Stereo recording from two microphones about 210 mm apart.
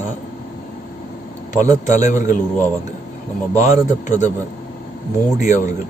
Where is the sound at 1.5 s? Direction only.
35° left (ahead or behind).